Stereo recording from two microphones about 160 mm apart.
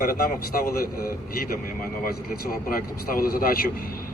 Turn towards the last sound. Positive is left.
turn(degrees=65)  # may be behind; listen again after turning